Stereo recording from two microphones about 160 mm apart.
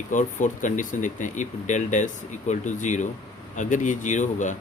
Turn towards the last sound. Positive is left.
turn(degrees=50)  # may be behind; listen again after turning